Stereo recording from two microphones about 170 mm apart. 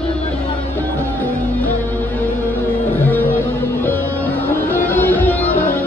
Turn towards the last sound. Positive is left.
turn(degrees=10)  # may be behind; listen again after turning